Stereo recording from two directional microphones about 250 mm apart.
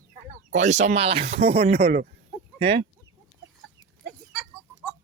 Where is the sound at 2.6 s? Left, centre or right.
Right.